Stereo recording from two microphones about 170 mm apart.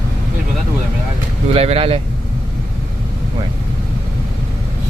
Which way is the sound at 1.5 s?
35° right (ahead or behind).